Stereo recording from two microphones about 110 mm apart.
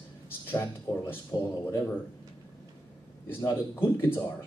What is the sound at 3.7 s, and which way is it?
Speech, 20° left (ahead or behind).